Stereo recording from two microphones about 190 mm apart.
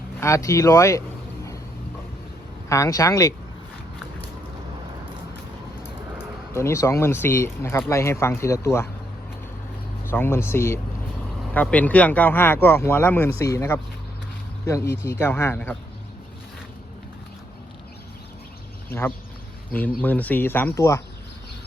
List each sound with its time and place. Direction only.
0.2 s speech: 15° left (ahead or behind)
2.6 s speech: 15° left (ahead or behind)
6.5 s speech: 15° left (ahead or behind)
10.0 s speech: 10° left (ahead or behind)
19.7 s speech: 10° left (ahead or behind)